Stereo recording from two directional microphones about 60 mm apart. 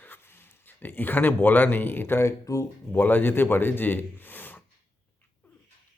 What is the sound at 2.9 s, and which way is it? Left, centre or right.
Speech, left.